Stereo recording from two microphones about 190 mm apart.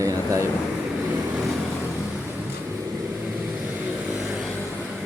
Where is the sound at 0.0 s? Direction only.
15° right (ahead or behind).